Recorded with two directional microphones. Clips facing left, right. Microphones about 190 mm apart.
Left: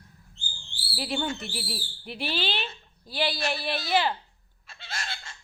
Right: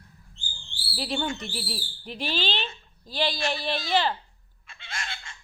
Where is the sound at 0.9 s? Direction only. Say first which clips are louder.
Right 1 dB; 10° left (ahead or behind).